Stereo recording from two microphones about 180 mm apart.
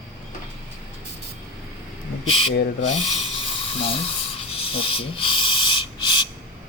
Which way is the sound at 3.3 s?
30° left (ahead or behind).